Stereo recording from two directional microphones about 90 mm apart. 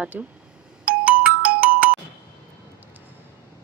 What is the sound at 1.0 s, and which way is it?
Ringtone, 15° right (ahead or behind).